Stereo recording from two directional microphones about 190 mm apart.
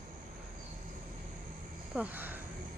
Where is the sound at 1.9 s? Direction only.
10° right (ahead or behind).